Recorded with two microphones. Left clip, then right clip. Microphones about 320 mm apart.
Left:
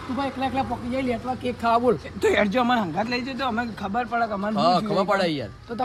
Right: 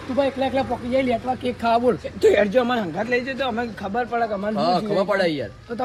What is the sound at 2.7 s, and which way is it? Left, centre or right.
Speech, left.